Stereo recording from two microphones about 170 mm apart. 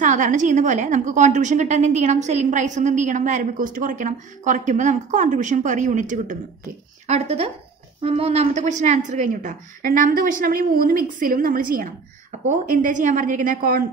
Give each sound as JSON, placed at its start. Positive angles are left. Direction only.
{"t": 0.0, "sound": "a woman's voice", "side_deg": -45}